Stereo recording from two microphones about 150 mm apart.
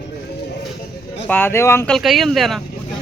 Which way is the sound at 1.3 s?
15° left (ahead or behind).